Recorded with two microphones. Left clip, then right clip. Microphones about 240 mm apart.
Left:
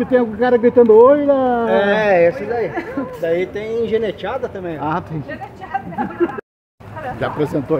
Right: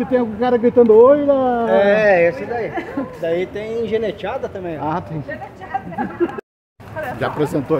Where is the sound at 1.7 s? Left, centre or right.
Left.